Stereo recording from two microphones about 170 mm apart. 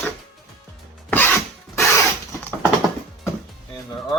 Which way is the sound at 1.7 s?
15° left (ahead or behind).